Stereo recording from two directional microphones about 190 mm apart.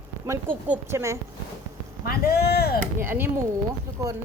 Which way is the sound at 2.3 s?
55° left (ahead or behind).